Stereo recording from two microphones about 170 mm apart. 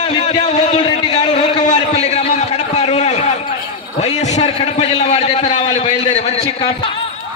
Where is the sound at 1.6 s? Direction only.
45° left (ahead or behind).